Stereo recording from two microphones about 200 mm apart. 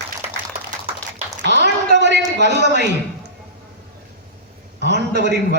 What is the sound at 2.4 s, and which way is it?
Speech, 60° right (ahead or behind).